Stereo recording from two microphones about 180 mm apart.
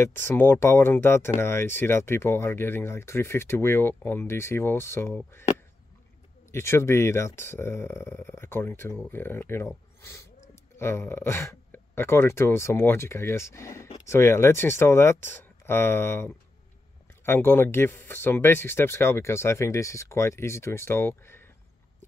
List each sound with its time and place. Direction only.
0.0 s speech: 10° left (ahead or behind)
6.5 s speech: 15° left (ahead or behind)